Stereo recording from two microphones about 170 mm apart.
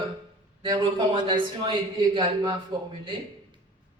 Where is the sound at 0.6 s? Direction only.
30° right (ahead or behind).